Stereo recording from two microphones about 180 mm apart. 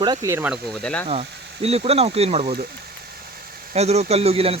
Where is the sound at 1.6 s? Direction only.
35° right (ahead or behind).